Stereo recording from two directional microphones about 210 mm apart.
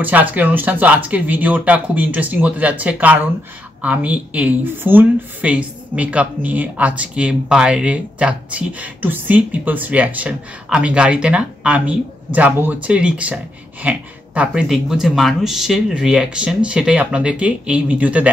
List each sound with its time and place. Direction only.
0.0 s speech: 10° right (ahead or behind)